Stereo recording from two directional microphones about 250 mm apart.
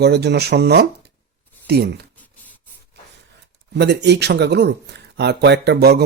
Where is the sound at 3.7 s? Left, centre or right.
Right.